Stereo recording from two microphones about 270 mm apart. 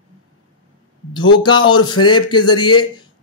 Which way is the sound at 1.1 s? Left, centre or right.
Centre.